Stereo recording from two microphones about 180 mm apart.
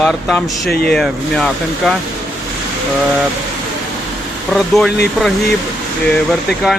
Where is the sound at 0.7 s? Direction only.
60° left (ahead or behind).